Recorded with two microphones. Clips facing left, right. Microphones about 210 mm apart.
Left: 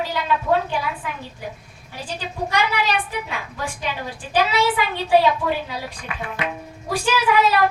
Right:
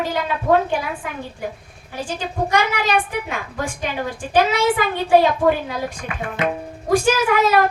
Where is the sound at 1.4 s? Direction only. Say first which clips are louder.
Right 4 dB; 50° right (ahead or behind).